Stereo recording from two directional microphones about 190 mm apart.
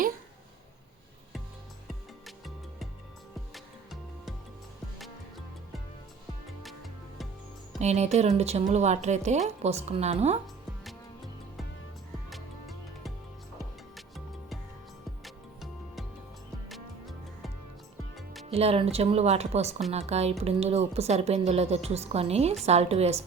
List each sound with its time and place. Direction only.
2.2 s music: centre (ahead or behind)
6.6 s music: centre (ahead or behind)
7.8 s a woman's voice: 35° right (ahead or behind)
12.3 s music: centre (ahead or behind)
15.2 s music: centre (ahead or behind)
18.4 s a woman's voice: 30° right (ahead or behind)